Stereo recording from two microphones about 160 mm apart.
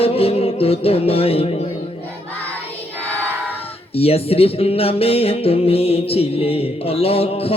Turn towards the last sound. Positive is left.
turn(degrees=40)  # may be behind; listen again after turning